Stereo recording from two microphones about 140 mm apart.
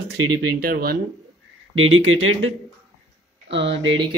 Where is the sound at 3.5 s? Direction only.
40° right (ahead or behind).